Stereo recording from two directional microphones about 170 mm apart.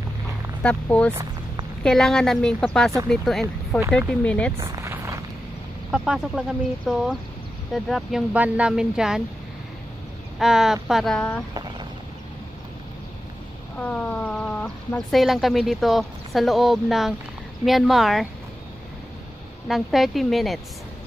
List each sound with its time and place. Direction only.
0.6 s speech: 5° left (ahead or behind)
4.6 s a sound: 15° right (ahead or behind)
5.9 s speech: 5° right (ahead or behind)
10.4 s speech: 5° right (ahead or behind)
13.7 s speech: 10° left (ahead or behind)
19.7 s speech: centre (ahead or behind)